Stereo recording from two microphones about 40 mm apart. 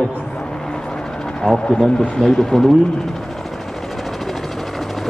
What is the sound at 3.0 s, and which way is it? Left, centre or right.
Vehicle, centre.